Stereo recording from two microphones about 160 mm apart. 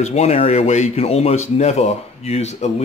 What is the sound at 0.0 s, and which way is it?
Speech, 45° left (ahead or behind).